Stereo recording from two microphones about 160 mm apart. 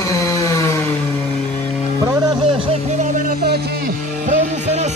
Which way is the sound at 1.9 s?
20° right (ahead or behind).